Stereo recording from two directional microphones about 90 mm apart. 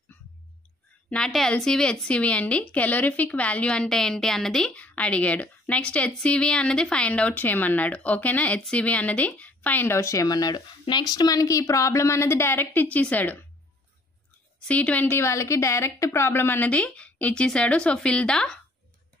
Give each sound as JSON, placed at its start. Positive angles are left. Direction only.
{"t": 1.1, "sound": "a woman's voice", "side_deg": 5}
{"t": 14.6, "sound": "a woman's voice", "side_deg": 15}